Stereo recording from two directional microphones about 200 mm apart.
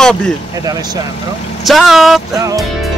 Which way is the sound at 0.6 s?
20° right (ahead or behind).